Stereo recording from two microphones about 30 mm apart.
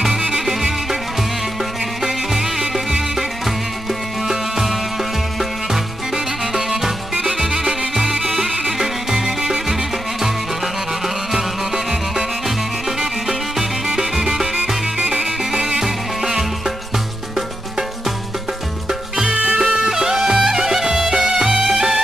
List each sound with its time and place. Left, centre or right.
0.0 s music: right
4.3 s music: centre
11.3 s music: centre
15.0 s music: right
15.8 s music: centre
19.2 s music: right
19.9 s music: centre